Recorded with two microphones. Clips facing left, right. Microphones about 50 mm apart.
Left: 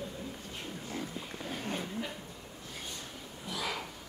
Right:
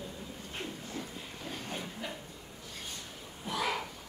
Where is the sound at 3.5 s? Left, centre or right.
Right.